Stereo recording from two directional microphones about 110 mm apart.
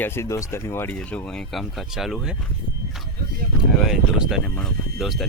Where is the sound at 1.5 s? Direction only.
Centre (ahead or behind).